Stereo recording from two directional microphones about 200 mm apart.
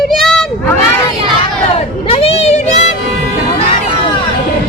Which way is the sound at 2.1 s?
30° left (ahead or behind).